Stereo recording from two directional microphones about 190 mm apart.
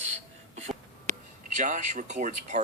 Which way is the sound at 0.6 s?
40° right (ahead or behind).